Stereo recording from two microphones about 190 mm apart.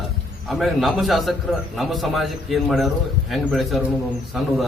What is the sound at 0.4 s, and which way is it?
A man's voice, centre (ahead or behind).